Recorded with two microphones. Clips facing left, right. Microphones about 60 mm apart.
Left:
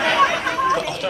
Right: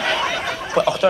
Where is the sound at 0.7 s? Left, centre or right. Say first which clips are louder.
Right 6 dB; right.